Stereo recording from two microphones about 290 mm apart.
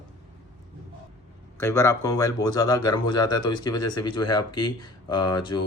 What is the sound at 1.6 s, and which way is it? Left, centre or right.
Speech, centre.